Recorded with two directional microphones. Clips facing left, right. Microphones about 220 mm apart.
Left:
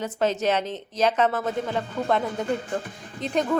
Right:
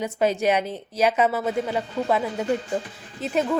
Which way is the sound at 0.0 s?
10° right (ahead or behind).